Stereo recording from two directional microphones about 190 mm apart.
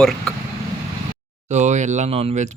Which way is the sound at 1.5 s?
40° right (ahead or behind).